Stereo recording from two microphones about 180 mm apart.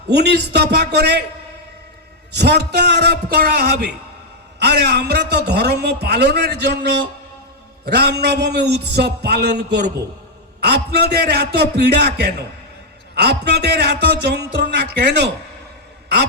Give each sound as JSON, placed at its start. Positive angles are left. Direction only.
{"t": 0.1, "sound": "a man's voice", "side_deg": -70}
{"t": 2.3, "sound": "a man's voice", "side_deg": -70}